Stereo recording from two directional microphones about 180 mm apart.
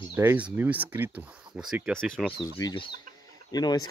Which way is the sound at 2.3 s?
20° left (ahead or behind).